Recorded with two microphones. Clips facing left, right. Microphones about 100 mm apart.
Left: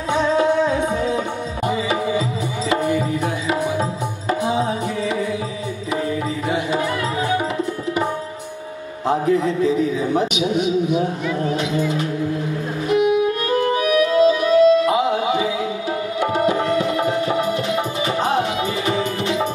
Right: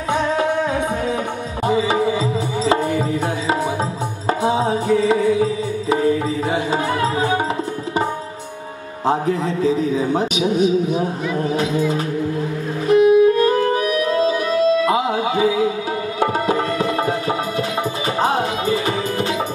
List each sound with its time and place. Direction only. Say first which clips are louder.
0.1 s music: left 2 dB; 55° right (ahead or behind)
1.7 s tabla: right 4 dB; 30° right (ahead or behind)
2.7 s music: even; 30° right (ahead or behind)
9.0 s music: left 1 dB; 35° right (ahead or behind)
10.1 s a man's voice: right 1 dB; 35° right (ahead or behind)
13.5 s music: right 1 dB; 35° right (ahead or behind)
18.2 s music: right 3 dB; 35° right (ahead or behind)